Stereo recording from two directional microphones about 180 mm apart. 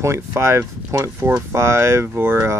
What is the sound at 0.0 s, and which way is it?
Speech, 15° right (ahead or behind).